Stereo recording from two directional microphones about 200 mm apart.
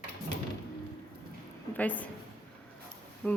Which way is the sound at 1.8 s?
5° left (ahead or behind).